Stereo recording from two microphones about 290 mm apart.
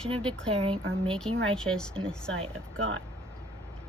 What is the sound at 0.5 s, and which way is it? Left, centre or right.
Speech, centre.